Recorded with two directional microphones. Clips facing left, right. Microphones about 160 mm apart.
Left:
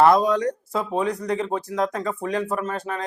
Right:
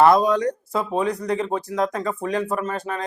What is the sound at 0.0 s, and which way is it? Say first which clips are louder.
Speech: right 1 dB; 10° right (ahead or behind).